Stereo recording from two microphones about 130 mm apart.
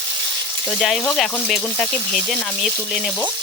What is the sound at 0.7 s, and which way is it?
Speech, centre (ahead or behind).